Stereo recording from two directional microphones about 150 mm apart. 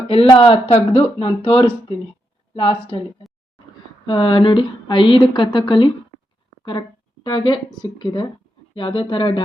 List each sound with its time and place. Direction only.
0.3 s speech: 35° left (ahead or behind)